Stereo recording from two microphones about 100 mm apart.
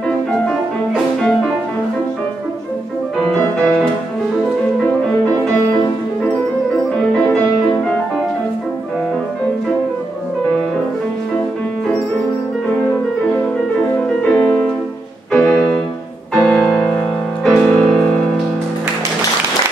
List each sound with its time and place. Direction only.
3.3 s music: 5° left (ahead or behind)
14.0 s music: 10° left (ahead or behind)